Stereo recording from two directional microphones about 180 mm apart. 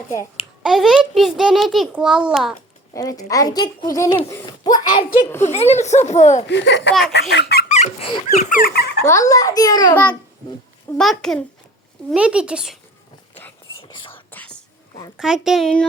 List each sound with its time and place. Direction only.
0.6 s a child's voice: centre (ahead or behind)
2.9 s a woman's voice: 20° left (ahead or behind)
5.4 s speech: 35° left (ahead or behind)
6.5 s speech: 80° left
7.1 s speech: 70° left (ahead or behind)
7.7 s a sound: 40° left (ahead or behind)
8.4 s speech: 50° left (ahead or behind)
9.0 s a woman's voice: 15° left (ahead or behind)
9.9 s a child's voice: 10° left (ahead or behind)
13.8 s whispering: 25° left (ahead or behind)
14.1 s whispering: 10° left (ahead or behind)
15.2 s a child's voice: centre (ahead or behind)